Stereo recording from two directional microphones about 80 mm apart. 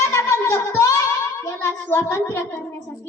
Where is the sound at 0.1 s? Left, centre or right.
Left.